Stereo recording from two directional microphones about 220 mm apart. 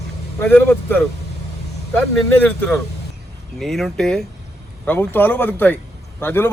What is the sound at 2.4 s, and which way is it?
Speech, 5° left (ahead or behind).